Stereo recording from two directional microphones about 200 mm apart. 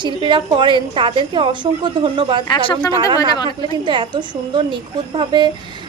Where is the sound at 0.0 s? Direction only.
25° right (ahead or behind).